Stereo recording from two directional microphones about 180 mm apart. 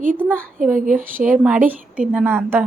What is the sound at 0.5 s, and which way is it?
Speech, 45° right (ahead or behind).